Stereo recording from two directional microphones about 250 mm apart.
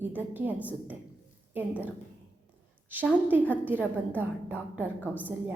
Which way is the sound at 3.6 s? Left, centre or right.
Centre.